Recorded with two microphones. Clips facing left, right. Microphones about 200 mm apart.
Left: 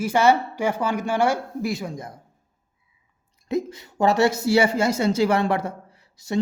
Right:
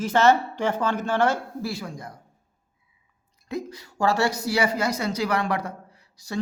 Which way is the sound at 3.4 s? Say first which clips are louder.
Left 6 dB; 25° left (ahead or behind).